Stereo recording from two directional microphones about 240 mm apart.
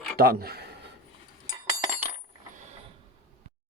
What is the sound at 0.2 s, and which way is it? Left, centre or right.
Speech, right.